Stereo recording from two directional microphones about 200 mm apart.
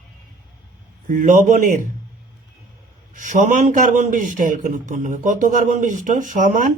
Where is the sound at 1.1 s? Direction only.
40° right (ahead or behind).